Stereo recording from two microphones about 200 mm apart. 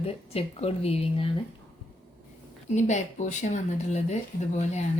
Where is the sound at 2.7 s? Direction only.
35° left (ahead or behind).